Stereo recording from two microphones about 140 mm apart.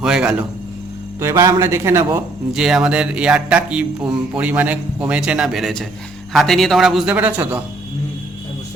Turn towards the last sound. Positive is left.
turn(degrees=-10)  # may be behind; listen again after turning